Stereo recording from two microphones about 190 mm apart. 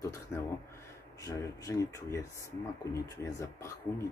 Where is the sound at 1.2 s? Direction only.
15° left (ahead or behind).